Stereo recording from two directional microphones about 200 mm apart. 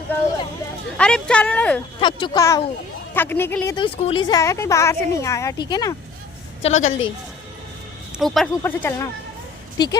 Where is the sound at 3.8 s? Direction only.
25° left (ahead or behind).